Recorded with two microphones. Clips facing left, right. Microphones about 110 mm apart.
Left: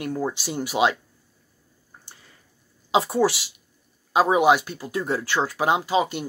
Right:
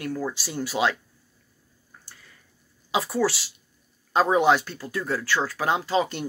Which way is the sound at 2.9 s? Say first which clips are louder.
Left 4 dB; 25° left (ahead or behind).